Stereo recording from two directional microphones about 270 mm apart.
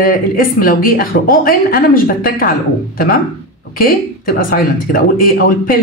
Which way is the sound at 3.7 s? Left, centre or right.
Left.